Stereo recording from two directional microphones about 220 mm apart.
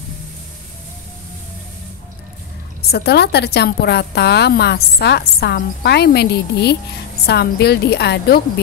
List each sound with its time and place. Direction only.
2.9 s a woman's voice: 45° left (ahead or behind)